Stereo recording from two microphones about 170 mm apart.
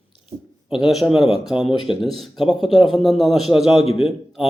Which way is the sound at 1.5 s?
30° left (ahead or behind).